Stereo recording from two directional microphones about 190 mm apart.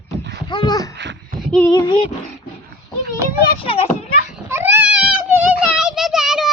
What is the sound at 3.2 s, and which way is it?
Children playing, 15° right (ahead or behind).